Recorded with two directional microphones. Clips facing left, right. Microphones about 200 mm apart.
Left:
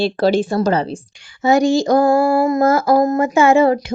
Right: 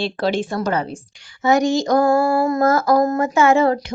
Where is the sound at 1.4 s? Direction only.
30° left (ahead or behind).